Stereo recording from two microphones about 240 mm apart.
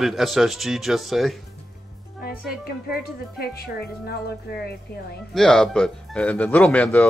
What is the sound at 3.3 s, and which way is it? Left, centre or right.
Speech, left.